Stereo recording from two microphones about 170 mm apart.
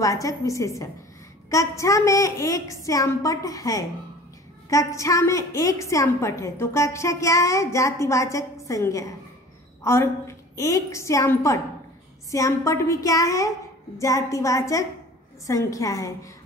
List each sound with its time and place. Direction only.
0.0 s a woman's voice: 20° left (ahead or behind)